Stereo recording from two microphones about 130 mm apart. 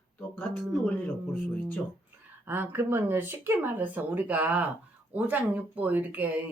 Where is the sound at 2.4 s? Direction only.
15° right (ahead or behind).